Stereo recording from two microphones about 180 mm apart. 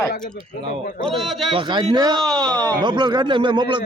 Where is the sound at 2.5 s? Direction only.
20° right (ahead or behind).